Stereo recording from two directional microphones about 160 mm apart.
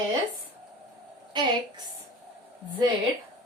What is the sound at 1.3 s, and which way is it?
Speech, 25° right (ahead or behind).